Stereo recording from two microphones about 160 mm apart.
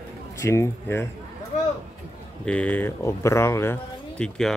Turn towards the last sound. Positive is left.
turn(degrees=5)  # may be behind; listen again after turning